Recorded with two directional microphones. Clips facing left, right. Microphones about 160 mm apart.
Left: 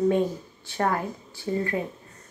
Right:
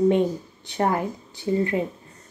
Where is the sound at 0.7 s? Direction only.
20° right (ahead or behind).